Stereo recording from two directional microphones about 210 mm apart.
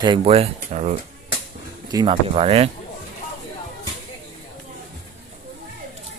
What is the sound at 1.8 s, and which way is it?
Speech, 20° right (ahead or behind).